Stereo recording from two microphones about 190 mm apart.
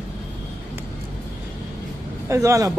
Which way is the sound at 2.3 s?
15° right (ahead or behind).